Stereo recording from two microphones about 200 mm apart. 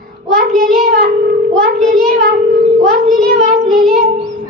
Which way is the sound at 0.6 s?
50° right (ahead or behind).